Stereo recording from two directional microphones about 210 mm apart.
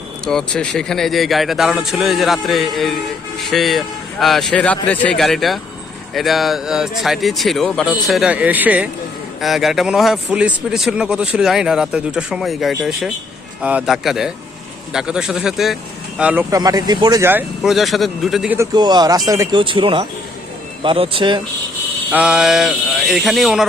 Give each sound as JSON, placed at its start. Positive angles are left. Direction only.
{"t": 0.3, "sound": "a man's voice", "side_deg": 5}
{"t": 18.5, "sound": "speech", "side_deg": -15}
{"t": 22.1, "sound": "a man's voice", "side_deg": -5}